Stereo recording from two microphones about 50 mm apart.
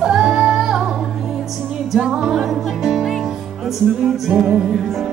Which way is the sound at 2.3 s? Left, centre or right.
Centre.